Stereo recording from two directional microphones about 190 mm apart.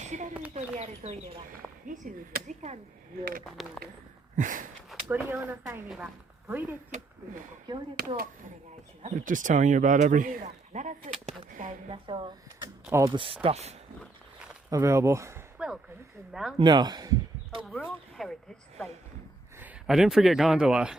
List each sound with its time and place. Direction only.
0.0 s a sound: 40° right (ahead or behind)
0.8 s speech: 35° right (ahead or behind)
3.4 s speech: centre (ahead or behind)
4.4 s a sound: 45° right (ahead or behind)
4.9 s speech: 5° right (ahead or behind)
7.9 s a sound: 55° right (ahead or behind)
9.0 s speech: 45° right (ahead or behind)
11.9 s speech: 25° right (ahead or behind)
12.8 s speech: 10° right (ahead or behind)
13.1 s speech: 30° right (ahead or behind)
14.7 s speech: 15° right (ahead or behind)
16.6 s speech: 25° right (ahead or behind)
17.6 s speech: centre (ahead or behind)
19.5 s speech: 5° right (ahead or behind)